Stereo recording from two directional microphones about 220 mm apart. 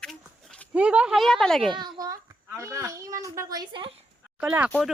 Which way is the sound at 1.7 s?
20° right (ahead or behind).